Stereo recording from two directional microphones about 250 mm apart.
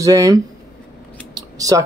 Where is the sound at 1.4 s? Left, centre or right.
Centre.